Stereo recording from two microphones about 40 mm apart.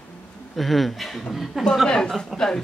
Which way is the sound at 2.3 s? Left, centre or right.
Centre.